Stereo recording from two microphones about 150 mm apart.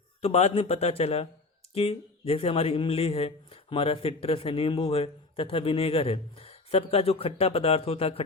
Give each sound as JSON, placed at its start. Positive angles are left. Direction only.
{"t": 0.2, "sound": "a man's voice", "side_deg": 45}